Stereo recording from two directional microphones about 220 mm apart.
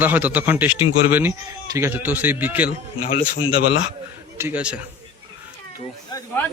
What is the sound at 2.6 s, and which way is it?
Speech, 40° left (ahead or behind).